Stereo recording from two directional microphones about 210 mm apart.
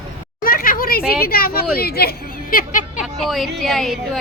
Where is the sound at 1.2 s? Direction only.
45° left (ahead or behind).